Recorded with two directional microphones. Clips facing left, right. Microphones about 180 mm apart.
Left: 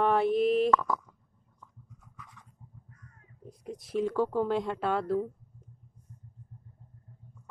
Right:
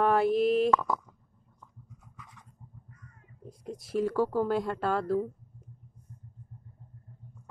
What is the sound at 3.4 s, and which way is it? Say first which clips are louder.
Speech: right 1 dB; centre (ahead or behind).